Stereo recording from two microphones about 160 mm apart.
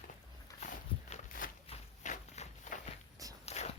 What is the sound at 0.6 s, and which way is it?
Walk, 55° left (ahead or behind).